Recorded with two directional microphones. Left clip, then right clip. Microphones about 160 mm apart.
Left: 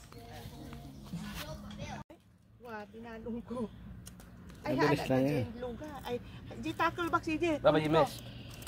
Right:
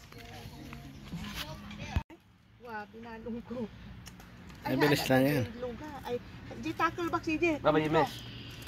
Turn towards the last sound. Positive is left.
turn(degrees=45)  # may be behind; listen again after turning